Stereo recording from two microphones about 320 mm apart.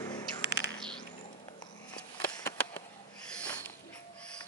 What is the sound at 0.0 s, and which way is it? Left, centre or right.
Bird, centre.